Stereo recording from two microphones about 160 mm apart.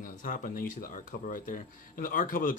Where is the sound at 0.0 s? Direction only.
55° left (ahead or behind).